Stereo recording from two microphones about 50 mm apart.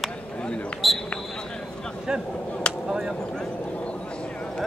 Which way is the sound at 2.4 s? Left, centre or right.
Left.